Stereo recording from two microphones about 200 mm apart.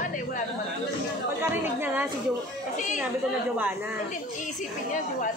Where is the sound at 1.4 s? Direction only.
10° right (ahead or behind).